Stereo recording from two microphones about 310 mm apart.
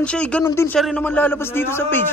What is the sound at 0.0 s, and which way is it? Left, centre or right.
A man's voice, centre.